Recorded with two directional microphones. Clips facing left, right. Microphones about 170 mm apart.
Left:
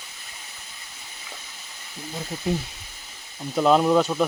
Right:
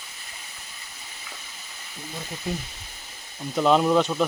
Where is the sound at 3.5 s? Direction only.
5° left (ahead or behind).